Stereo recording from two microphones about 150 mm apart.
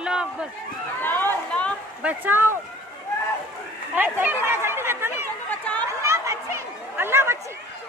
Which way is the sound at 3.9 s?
10° right (ahead or behind).